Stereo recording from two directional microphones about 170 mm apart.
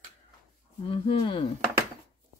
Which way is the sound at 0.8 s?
30° left (ahead or behind).